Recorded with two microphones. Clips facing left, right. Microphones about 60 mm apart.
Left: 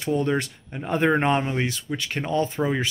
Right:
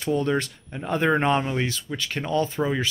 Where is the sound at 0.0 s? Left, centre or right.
Centre.